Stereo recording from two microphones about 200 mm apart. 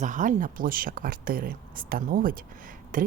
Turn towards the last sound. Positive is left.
turn(degrees=-40)  # may be behind; listen again after turning